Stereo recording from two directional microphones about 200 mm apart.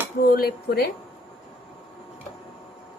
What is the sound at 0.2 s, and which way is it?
Speech, 50° left (ahead or behind).